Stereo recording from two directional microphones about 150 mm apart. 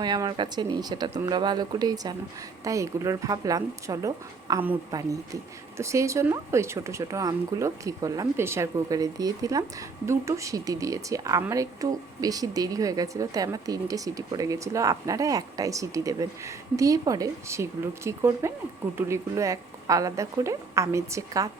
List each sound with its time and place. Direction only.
0.0 s speech: 25° right (ahead or behind)